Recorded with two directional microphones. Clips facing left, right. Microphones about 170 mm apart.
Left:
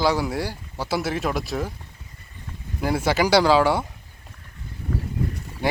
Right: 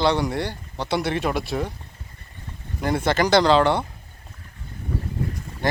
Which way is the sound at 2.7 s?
5° left (ahead or behind).